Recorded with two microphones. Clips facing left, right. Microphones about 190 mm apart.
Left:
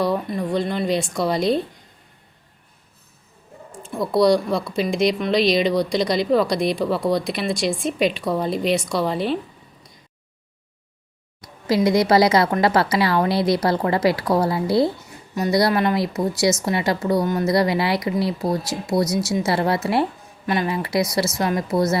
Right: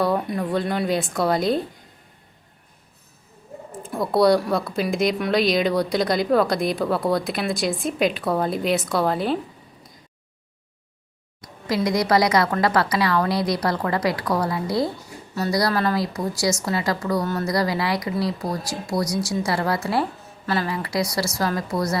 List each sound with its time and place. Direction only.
0.3 s speech: 10° right (ahead or behind)
4.2 s speech: 5° right (ahead or behind)
11.7 s speech: 25° left (ahead or behind)